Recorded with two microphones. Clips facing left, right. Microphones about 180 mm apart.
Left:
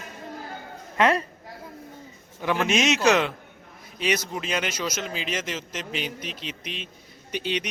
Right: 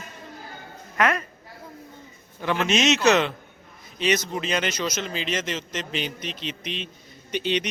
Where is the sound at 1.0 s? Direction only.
30° left (ahead or behind).